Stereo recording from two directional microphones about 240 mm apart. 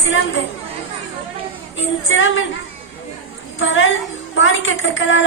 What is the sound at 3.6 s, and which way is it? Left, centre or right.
A woman's voice, left.